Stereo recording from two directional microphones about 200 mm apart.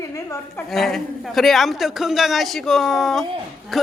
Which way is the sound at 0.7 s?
Centre (ahead or behind).